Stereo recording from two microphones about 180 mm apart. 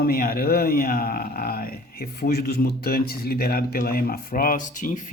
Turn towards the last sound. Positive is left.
turn(degrees=45)  # may be behind; listen again after turning